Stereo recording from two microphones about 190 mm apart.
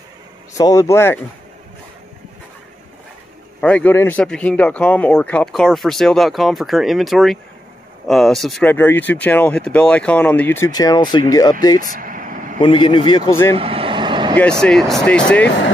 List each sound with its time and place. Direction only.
0.6 s speech: 15° left (ahead or behind)
3.6 s a man's voice: 10° left (ahead or behind)
11.8 s vehicle: 45° right (ahead or behind)
12.5 s speech: 25° left (ahead or behind)
13.5 s vehicle: 30° right (ahead or behind)
14.6 s a man's voice: centre (ahead or behind)